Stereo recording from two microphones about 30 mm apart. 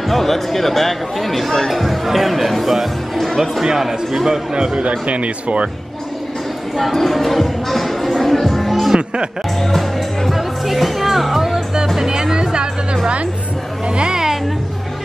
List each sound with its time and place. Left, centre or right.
0.1 s speech: centre
4.7 s speech: right
6.8 s music: centre
8.9 s music: right
9.6 s music: centre
10.3 s music: centre
12.0 s music: right
13.8 s music: right